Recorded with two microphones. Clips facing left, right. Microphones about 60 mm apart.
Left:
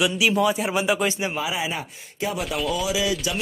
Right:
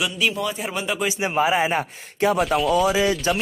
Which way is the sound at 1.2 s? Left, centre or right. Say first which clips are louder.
Right 6 dB; right.